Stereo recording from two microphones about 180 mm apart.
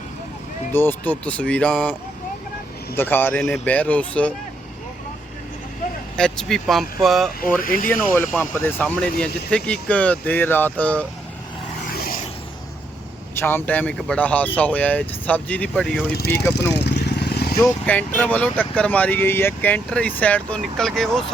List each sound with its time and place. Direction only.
0.7 s speech: 10° left (ahead or behind)
6.1 s speech: 5° left (ahead or behind)
7.6 s speech: 50° left (ahead or behind)
7.9 s speech: 10° left (ahead or behind)
11.9 s vehicle: 55° left (ahead or behind)
13.3 s speech: 10° left (ahead or behind)
16.1 s speech: 60° left (ahead or behind)
16.7 s vehicle: 70° left (ahead or behind)
17.6 s speech: 10° left (ahead or behind)